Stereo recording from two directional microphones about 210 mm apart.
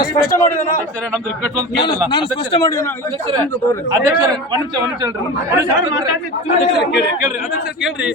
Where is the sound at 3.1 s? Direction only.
25° right (ahead or behind).